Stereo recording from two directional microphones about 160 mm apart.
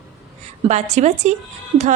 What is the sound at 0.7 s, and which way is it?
Speech, 45° right (ahead or behind).